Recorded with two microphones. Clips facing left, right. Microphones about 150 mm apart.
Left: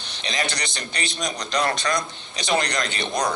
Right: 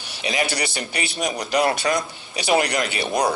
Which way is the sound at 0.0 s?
10° right (ahead or behind).